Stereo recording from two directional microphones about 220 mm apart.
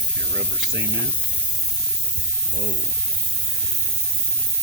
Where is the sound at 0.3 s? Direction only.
50° right (ahead or behind).